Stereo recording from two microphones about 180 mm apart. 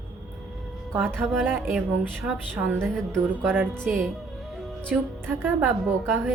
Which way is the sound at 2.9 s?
5° left (ahead or behind).